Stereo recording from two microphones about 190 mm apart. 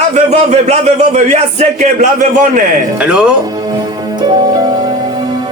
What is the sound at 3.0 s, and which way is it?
Speech, 5° right (ahead or behind).